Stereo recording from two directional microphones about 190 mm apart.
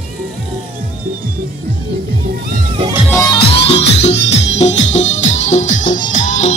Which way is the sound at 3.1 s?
20° left (ahead or behind).